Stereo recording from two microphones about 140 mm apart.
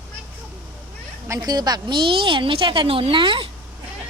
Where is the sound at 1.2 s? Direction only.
25° right (ahead or behind).